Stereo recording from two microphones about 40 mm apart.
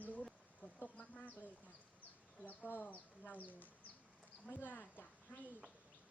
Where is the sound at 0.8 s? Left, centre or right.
Left.